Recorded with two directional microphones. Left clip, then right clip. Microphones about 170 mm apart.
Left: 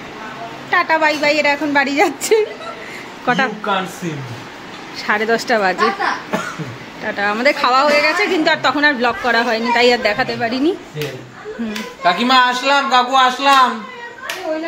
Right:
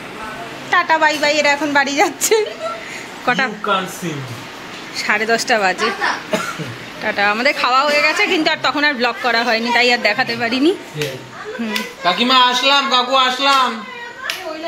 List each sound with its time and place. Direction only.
0.7 s a woman's voice: 10° left (ahead or behind)
4.9 s a woman's voice: 15° left (ahead or behind)
7.1 s a woman's voice: 5° left (ahead or behind)
12.0 s a woman's voice: 15° left (ahead or behind)
13.1 s a woman's voice: centre (ahead or behind)